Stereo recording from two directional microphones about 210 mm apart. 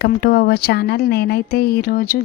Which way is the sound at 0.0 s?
50° left (ahead or behind).